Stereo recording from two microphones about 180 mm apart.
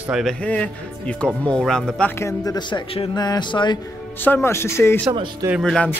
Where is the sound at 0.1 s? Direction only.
Centre (ahead or behind); by 3.8 s 25° left (ahead or behind).